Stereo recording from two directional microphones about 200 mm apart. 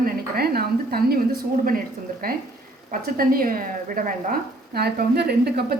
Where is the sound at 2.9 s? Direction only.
45° right (ahead or behind).